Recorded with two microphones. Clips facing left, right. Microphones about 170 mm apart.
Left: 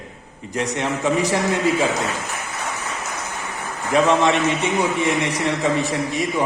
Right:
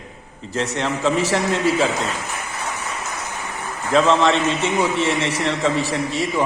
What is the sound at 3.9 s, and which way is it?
A man's voice, 15° left (ahead or behind).